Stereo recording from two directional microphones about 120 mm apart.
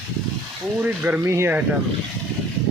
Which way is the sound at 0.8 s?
15° right (ahead or behind).